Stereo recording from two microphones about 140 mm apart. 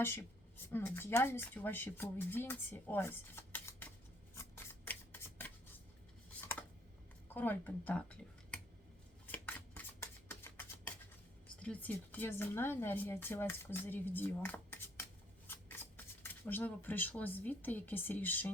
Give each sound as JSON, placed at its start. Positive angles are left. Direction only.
{"t": 0.0, "sound": "speech", "side_deg": 15}
{"t": 4.4, "sound": "shuffling cards", "side_deg": 15}
{"t": 7.3, "sound": "speech", "side_deg": 15}
{"t": 9.2, "sound": "shuffling cards", "side_deg": 10}
{"t": 11.6, "sound": "speech", "side_deg": 10}